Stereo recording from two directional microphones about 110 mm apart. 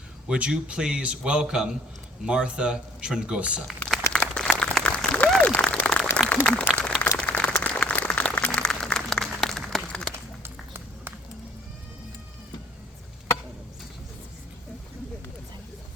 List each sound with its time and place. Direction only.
0.3 s a man's voice: 10° right (ahead or behind)
3.8 s crumpling: 5° left (ahead or behind)
4.1 s a sound: 10° left (ahead or behind)
6.1 s applause: 10° left (ahead or behind)
7.2 s a sound: 10° left (ahead or behind)
7.5 s applause: 10° left (ahead or behind)
10.4 s music: 20° right (ahead or behind)